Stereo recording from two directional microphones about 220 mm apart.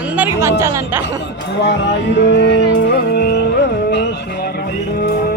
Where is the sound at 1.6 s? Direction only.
50° left (ahead or behind).